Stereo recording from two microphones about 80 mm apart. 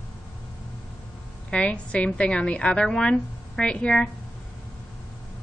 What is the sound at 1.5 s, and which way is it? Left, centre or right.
A woman's voice, centre.